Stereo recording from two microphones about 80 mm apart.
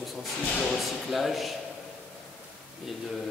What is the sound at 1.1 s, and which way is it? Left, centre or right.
Speech, centre.